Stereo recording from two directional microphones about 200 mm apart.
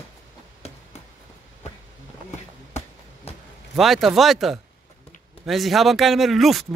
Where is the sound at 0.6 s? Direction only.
30° left (ahead or behind).